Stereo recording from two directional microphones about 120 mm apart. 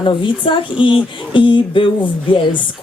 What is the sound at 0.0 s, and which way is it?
A woman's voice, 45° left (ahead or behind).